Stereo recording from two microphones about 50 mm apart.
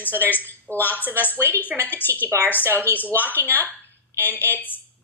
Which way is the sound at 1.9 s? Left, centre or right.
Left.